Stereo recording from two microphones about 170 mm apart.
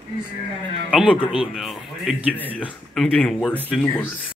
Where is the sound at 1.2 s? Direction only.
30° left (ahead or behind).